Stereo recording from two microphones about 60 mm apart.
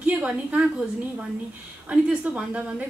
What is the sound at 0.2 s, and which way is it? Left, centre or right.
Speech, right.